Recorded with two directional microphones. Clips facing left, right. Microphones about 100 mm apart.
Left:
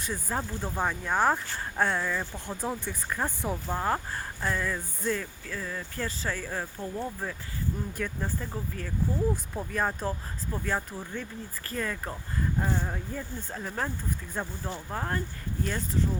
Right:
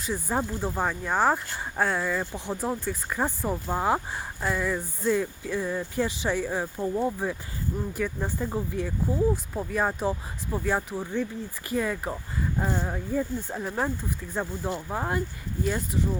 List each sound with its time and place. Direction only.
0.1 s speech: 15° right (ahead or behind)
8.0 s speech: 5° right (ahead or behind)